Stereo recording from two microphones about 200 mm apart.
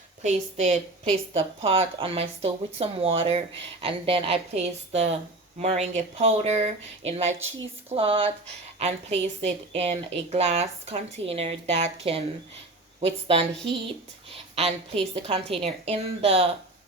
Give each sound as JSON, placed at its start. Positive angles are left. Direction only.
{"t": 0.2, "sound": "a woman's voice", "side_deg": -35}